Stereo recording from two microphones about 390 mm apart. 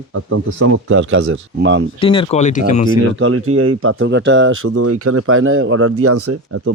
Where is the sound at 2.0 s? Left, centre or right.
Centre.